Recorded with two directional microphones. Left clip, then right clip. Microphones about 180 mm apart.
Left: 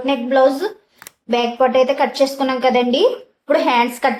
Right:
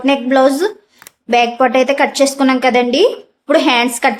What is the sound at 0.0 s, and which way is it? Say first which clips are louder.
A woman's voice: right 3 dB; 45° right (ahead or behind).